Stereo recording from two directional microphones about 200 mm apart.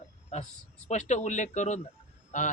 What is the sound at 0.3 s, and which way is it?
A man's voice, 35° left (ahead or behind).